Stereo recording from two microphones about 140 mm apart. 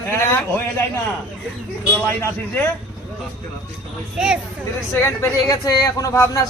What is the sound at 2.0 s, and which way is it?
Speech, 20° left (ahead or behind).